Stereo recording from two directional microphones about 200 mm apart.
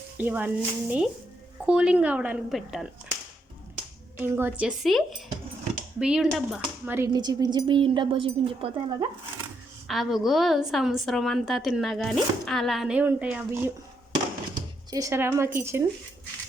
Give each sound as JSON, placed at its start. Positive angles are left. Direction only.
{"t": 0.2, "sound": "a woman's voice", "side_deg": -10}
{"t": 4.2, "sound": "a woman's voice", "side_deg": -10}
{"t": 9.8, "sound": "a woman's voice", "side_deg": 0}
{"t": 14.5, "sound": "speech", "side_deg": -20}